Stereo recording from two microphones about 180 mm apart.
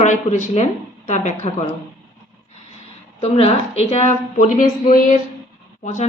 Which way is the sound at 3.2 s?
35° left (ahead or behind).